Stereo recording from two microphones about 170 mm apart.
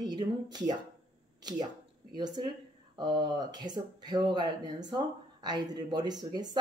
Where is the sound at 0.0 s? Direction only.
25° right (ahead or behind).